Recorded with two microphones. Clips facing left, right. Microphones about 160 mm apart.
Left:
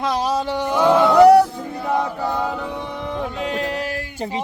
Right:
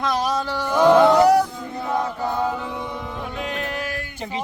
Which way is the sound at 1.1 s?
60° left (ahead or behind).